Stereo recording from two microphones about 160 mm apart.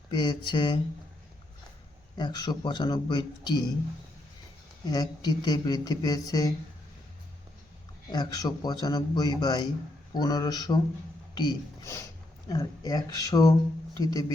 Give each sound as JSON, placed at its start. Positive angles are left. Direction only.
{"t": 0.1, "sound": "speech", "side_deg": 30}
{"t": 2.1, "sound": "speech", "side_deg": 25}
{"t": 4.9, "sound": "speech", "side_deg": 25}
{"t": 8.1, "sound": "speech", "side_deg": 25}